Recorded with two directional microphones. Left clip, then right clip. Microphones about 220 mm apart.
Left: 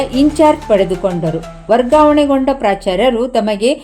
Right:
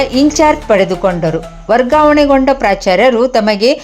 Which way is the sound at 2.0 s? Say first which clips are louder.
Right 3 dB; 5° right (ahead or behind).